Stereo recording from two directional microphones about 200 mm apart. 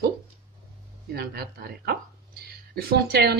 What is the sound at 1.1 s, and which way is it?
Speech, 50° right (ahead or behind).